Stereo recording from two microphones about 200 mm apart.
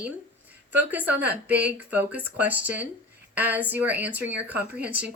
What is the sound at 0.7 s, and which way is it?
Speech, 10° right (ahead or behind).